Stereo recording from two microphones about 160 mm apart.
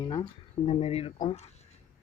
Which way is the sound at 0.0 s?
25° left (ahead or behind).